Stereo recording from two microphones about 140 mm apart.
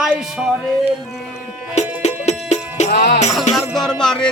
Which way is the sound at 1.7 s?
50° left (ahead or behind).